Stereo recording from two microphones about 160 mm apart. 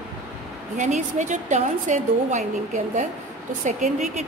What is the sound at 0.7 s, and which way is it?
A woman's voice, 50° right (ahead or behind).